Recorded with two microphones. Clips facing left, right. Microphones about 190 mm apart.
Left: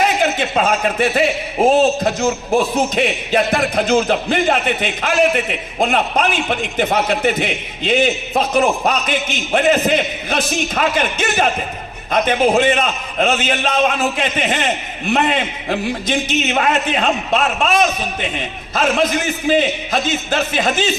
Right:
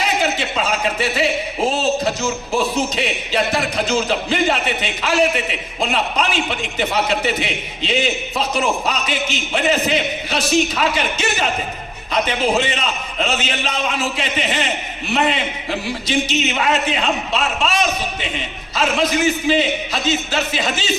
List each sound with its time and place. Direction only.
0.0 s a man's voice: 50° left (ahead or behind)